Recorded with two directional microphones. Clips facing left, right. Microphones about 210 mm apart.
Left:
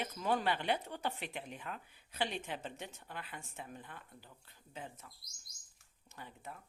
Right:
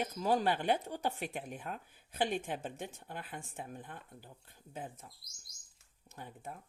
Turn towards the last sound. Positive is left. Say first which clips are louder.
# right 3 dB
turn(degrees=-50)  # may be behind; listen again after turning